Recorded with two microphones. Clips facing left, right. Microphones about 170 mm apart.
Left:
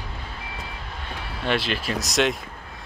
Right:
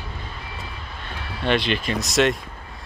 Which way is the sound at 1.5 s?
5° left (ahead or behind).